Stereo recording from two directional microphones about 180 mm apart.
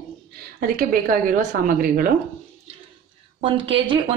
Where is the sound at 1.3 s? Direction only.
50° right (ahead or behind).